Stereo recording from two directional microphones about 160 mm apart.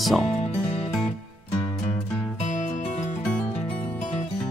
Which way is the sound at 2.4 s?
50° left (ahead or behind).